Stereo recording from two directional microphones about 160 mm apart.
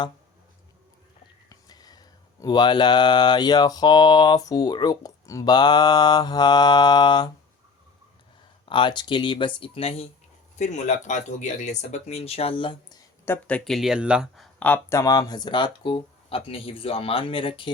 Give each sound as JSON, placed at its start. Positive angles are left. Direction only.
{"t": 1.5, "sound": "mantra", "side_deg": 25}
{"t": 8.6, "sound": "speech", "side_deg": 30}
{"t": 13.2, "sound": "speech", "side_deg": 10}
{"t": 13.7, "sound": "mantra", "side_deg": 0}